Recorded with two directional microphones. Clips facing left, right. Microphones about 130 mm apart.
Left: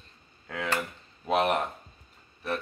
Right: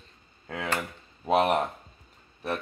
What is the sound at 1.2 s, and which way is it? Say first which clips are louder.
Speech: right 2 dB; 25° right (ahead or behind).